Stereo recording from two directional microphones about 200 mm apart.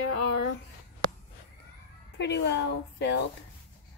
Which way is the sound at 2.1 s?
60° left (ahead or behind).